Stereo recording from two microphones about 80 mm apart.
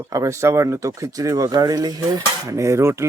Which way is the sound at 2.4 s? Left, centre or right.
Right.